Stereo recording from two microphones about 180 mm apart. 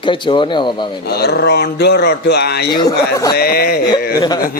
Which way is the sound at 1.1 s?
65° left (ahead or behind).